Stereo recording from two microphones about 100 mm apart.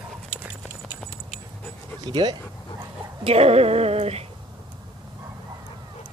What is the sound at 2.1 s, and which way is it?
Speech, 45° right (ahead or behind).